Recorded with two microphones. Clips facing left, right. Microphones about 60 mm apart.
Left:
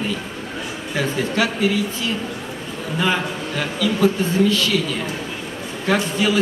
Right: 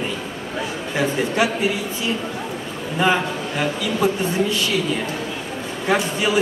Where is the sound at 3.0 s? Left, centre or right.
Right.